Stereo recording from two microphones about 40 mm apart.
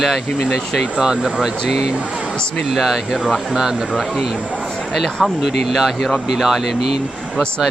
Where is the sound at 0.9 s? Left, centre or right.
Centre.